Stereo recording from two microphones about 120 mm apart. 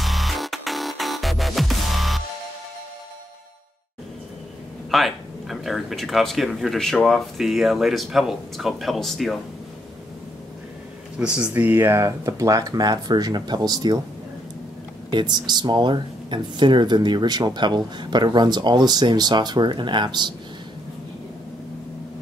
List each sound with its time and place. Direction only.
0.0 s music: centre (ahead or behind)
4.9 s speech: centre (ahead or behind)
11.1 s speech: 10° right (ahead or behind); by 13.9 s 35° right (ahead or behind)
15.0 s speech: 40° right (ahead or behind)